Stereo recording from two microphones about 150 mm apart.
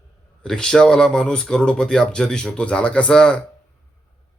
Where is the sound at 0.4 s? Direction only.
5° left (ahead or behind).